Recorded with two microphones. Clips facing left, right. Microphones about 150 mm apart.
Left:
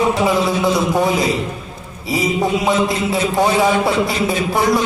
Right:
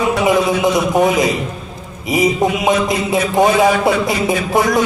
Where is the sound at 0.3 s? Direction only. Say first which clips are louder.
Right 2 dB; 20° right (ahead or behind).